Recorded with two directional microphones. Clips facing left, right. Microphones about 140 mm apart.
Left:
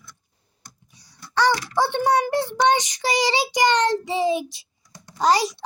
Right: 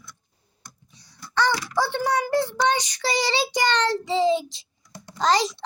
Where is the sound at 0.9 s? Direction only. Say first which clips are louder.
Left 1 dB; 15° left (ahead or behind).